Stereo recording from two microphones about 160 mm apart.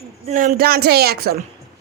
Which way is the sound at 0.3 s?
55° right (ahead or behind).